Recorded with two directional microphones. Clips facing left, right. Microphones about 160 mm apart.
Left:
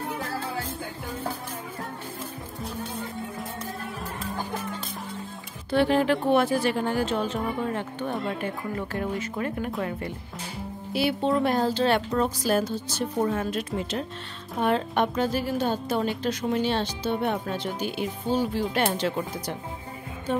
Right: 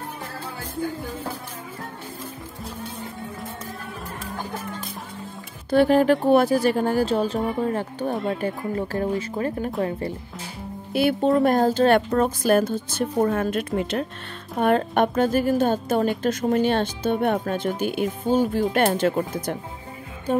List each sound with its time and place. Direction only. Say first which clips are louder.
5.7 s a woman's voice: right 5 dB; 45° right (ahead or behind)
10.9 s a woman's voice: right 5 dB; 50° right (ahead or behind)